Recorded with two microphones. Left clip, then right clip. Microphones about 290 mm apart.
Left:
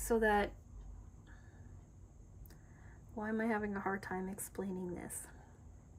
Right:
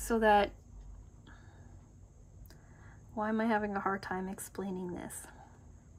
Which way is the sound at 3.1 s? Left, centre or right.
Centre.